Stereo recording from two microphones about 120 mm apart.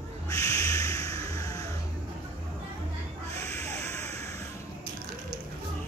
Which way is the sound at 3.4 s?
25° left (ahead or behind).